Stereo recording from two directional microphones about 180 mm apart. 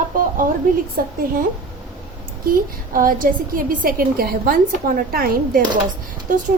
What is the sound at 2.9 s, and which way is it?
A woman's voice, 50° right (ahead or behind).